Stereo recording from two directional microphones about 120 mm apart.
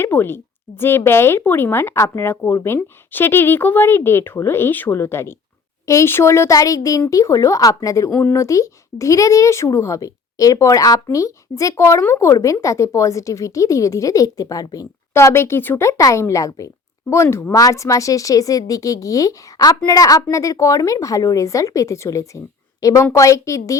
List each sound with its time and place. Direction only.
0.0 s speech: 20° left (ahead or behind)